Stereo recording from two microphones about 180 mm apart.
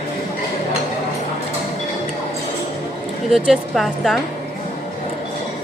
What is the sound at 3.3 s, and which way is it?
Speech, centre (ahead or behind).